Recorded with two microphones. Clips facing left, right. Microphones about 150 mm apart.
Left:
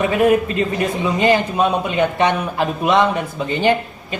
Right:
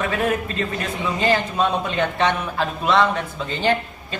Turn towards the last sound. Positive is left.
turn(degrees=15)  # may be behind; listen again after turning